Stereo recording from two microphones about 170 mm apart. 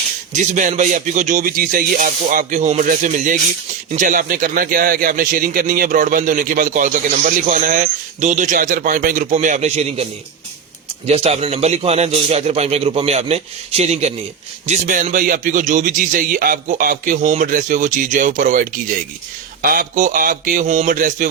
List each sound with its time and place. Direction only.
0.3 s a man's voice: 50° right (ahead or behind)